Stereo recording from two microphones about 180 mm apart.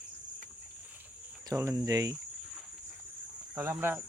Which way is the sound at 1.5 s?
15° right (ahead or behind).